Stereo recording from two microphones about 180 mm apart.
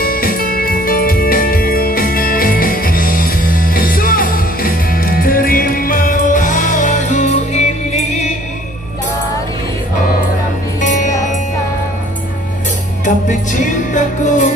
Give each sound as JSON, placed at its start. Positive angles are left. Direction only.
{"t": 0.0, "sound": "music", "side_deg": 55}
{"t": 10.8, "sound": "music", "side_deg": 45}
{"t": 13.0, "sound": "music", "side_deg": 45}